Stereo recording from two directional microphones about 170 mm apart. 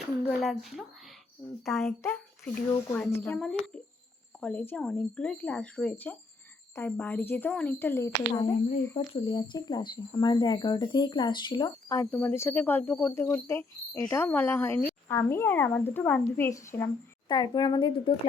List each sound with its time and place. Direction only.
0.3 s speech: centre (ahead or behind)
3.3 s speech: centre (ahead or behind); by 9.0 s 15° left (ahead or behind)
9.1 s speech: 25° left (ahead or behind)